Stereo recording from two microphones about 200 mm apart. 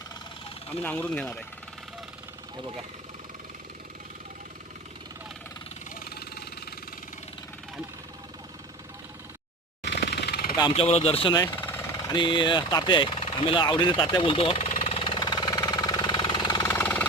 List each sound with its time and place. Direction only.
0.8 s speech: 10° left (ahead or behind)
5.9 s vehicle: 50° left (ahead or behind)
9.8 s a sound: 55° left (ahead or behind)
10.6 s speech: 30° left (ahead or behind)
11.5 s vehicle: 10° left (ahead or behind)
12.1 s speech: 25° left (ahead or behind)
14.8 s jackhammer: 30° left (ahead or behind); by 17.1 s 10° left (ahead or behind)